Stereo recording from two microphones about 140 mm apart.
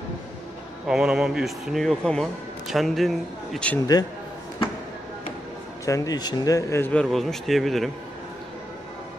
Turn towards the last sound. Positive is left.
turn(degrees=0)  # may be behind; listen again after turning